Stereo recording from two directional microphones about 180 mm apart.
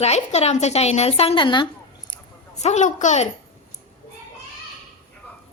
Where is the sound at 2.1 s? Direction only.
40° left (ahead or behind).